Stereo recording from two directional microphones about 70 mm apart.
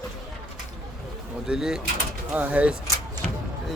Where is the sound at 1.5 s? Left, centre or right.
Centre.